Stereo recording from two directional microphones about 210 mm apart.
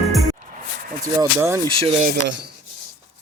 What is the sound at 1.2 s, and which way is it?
Speech, 15° right (ahead or behind).